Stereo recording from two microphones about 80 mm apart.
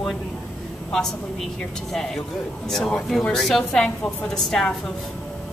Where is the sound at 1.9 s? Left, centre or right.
Centre.